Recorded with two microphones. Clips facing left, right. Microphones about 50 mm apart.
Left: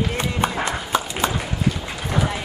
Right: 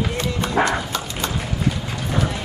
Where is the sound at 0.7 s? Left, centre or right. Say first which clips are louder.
Even; centre.